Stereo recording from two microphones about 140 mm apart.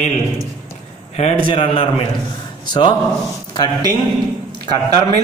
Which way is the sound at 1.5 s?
40° left (ahead or behind).